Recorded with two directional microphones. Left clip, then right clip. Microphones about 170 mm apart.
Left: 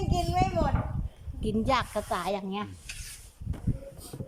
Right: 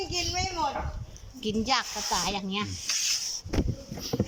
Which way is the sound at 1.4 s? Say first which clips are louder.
Even; 50° left (ahead or behind).